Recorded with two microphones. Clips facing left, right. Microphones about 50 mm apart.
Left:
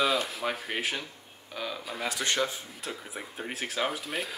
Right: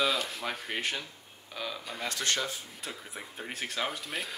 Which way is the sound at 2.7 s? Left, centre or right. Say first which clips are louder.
Left 3 dB; centre.